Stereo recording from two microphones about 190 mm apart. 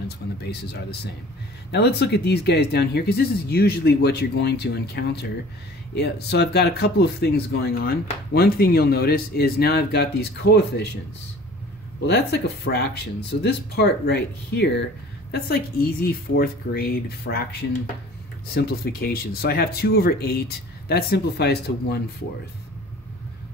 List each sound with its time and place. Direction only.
0.4 s speech: 60° left (ahead or behind)
12.1 s speech: 60° left (ahead or behind)